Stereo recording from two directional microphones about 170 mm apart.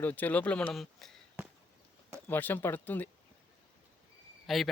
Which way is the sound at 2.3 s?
10° left (ahead or behind).